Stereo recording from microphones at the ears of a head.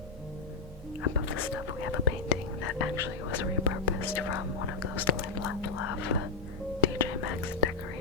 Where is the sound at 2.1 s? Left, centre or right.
Left.